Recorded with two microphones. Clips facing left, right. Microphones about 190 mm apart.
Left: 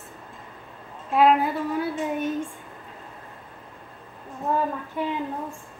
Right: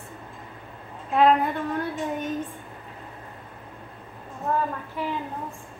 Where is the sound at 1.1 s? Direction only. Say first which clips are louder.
Left 1 dB; 5° left (ahead or behind).